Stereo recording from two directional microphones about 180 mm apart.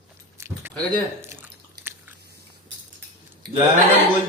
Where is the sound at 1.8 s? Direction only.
65° right (ahead or behind).